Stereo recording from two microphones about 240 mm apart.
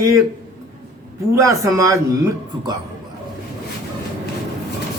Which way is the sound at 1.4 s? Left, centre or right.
Centre.